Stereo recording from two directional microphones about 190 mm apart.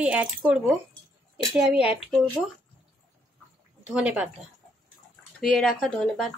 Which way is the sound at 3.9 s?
5° right (ahead or behind).